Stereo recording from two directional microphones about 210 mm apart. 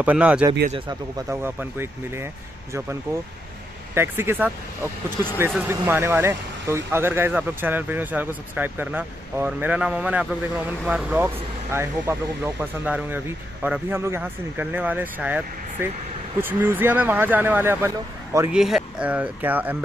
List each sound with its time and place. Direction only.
0.0 s speech: 5° right (ahead or behind)
0.7 s speech: 25° right (ahead or behind)
1.3 s speech: 10° right (ahead or behind)
3.9 s speech: 10° right (ahead or behind)
5.5 s speech: 10° right (ahead or behind)